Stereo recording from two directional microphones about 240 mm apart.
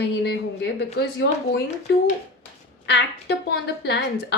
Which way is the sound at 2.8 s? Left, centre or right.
Left.